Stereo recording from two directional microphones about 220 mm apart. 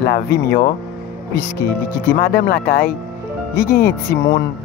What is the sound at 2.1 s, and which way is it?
Speech, 45° left (ahead or behind).